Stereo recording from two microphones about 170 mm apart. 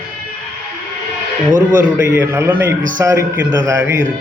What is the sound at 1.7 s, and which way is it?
A man's voice, 15° right (ahead or behind).